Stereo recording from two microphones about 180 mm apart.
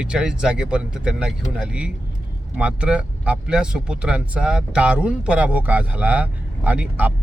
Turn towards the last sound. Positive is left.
turn(degrees=-10)  # may be behind; listen again after turning